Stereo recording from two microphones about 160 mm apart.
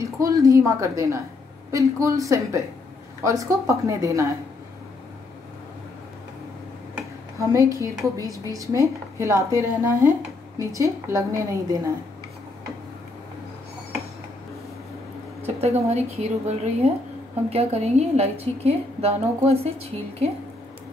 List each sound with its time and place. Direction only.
0.0 s a woman's voice: 20° right (ahead or behind)
7.3 s a woman's voice: 20° right (ahead or behind)
15.4 s a woman's voice: 40° right (ahead or behind)